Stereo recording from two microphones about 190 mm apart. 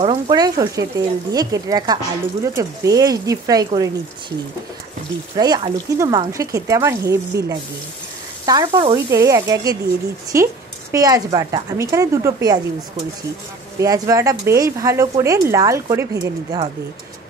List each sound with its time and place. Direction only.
0.0 s speech: 25° right (ahead or behind)
5.3 s speech: 20° right (ahead or behind)
13.7 s speech: 20° right (ahead or behind)